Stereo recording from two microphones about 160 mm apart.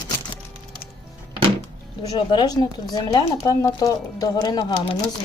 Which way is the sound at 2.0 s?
30° left (ahead or behind).